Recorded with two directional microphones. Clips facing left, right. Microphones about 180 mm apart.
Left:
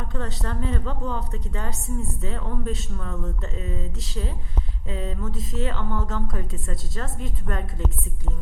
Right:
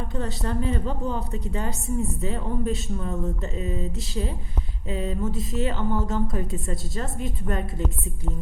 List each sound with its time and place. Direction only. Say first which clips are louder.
0.1 s speech: right 2 dB; 15° right (ahead or behind)